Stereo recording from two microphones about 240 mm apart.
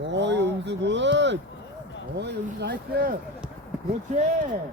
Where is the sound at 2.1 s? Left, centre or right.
Right.